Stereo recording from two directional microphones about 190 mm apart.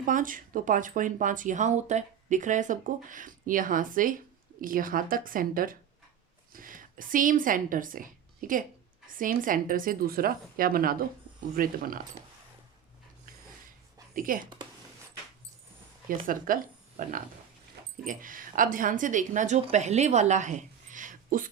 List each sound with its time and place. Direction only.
0.0 s a woman's voice: 45° right (ahead or behind)
14.2 s speech: 45° right (ahead or behind)
16.2 s speech: 45° right (ahead or behind)